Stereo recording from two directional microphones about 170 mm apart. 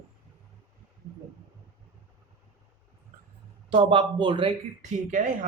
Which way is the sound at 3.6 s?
30° right (ahead or behind).